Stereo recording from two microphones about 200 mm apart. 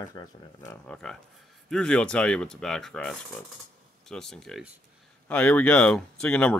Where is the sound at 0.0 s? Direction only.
20° left (ahead or behind).